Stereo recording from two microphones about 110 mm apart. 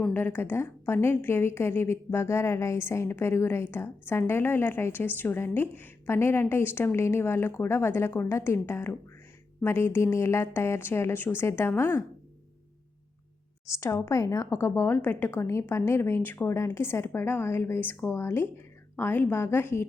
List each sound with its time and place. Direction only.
0.0 s a woman's voice: 20° left (ahead or behind)
13.7 s a woman's voice: 25° left (ahead or behind)